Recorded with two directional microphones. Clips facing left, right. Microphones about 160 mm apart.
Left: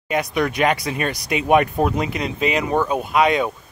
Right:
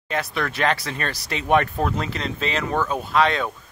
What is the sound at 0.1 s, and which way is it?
Speech, 15° left (ahead or behind).